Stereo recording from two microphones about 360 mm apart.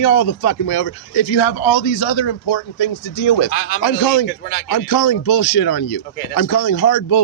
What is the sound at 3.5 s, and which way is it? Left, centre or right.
Speech, left.